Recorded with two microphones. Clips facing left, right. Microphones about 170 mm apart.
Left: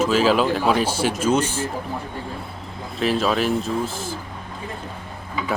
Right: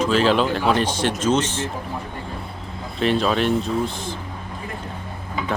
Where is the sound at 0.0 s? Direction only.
5° left (ahead or behind).